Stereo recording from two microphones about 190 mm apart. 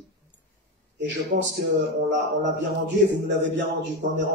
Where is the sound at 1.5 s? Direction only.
65° right (ahead or behind).